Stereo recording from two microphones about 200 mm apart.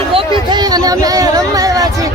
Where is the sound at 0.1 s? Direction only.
25° right (ahead or behind).